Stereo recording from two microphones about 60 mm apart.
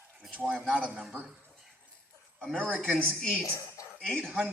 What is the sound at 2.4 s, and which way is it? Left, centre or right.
A woman's voice, centre.